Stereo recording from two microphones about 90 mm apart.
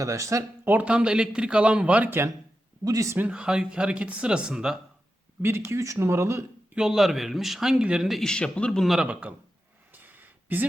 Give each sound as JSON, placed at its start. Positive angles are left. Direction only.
{"t": 0.0, "sound": "speech", "side_deg": -35}
{"t": 0.7, "sound": "a man's voice", "side_deg": -15}
{"t": 2.8, "sound": "speech", "side_deg": -40}
{"t": 3.2, "sound": "a man's voice", "side_deg": -15}
{"t": 5.4, "sound": "speech", "side_deg": -25}
{"t": 6.7, "sound": "speech", "side_deg": -5}
{"t": 9.0, "sound": "a man's voice", "side_deg": -15}
{"t": 9.9, "sound": "a sound", "side_deg": -20}